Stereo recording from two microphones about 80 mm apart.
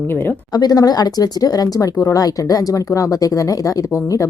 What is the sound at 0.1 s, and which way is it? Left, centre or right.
Speech, left.